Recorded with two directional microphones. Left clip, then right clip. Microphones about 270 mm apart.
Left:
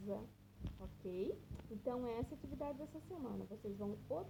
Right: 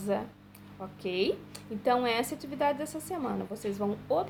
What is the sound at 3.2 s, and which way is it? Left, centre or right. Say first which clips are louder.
A woman's voice: right 14 dB; right.